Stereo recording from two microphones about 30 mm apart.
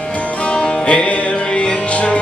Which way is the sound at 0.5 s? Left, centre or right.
Left.